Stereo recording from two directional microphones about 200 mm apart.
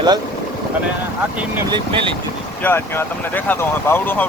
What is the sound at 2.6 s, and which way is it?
Speech, 10° left (ahead or behind).